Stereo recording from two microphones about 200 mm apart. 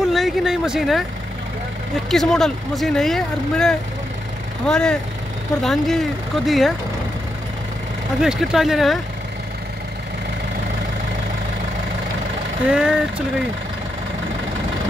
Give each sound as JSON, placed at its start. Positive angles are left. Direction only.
{"t": 0.0, "sound": "speech", "side_deg": 0}
{"t": 2.0, "sound": "speech", "side_deg": 0}
{"t": 8.2, "sound": "speech", "side_deg": -5}
{"t": 12.6, "sound": "speech", "side_deg": -5}